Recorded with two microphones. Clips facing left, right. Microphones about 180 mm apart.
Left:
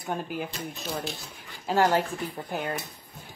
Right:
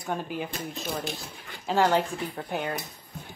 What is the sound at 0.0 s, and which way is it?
Speech, centre (ahead or behind).